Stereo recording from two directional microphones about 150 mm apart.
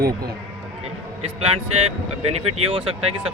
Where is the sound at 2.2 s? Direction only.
45° right (ahead or behind).